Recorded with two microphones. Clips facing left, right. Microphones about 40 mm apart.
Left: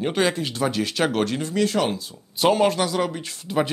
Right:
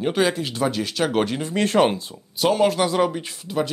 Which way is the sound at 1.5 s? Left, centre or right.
Right.